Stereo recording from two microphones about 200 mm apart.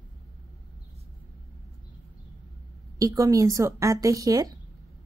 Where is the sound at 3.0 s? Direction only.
15° right (ahead or behind).